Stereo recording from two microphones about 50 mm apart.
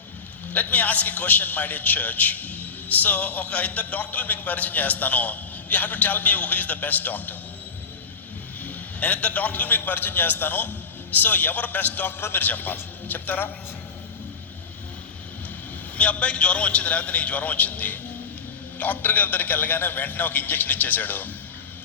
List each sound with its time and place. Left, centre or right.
0.5 s a man's voice: left
8.6 s a man's voice: left
16.0 s a man's voice: left